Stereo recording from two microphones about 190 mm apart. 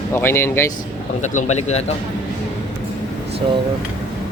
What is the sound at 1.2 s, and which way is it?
Speech, 40° left (ahead or behind).